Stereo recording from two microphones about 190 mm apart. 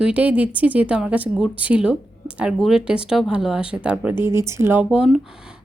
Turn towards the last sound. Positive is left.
turn(degrees=0)  # may be behind; listen again after turning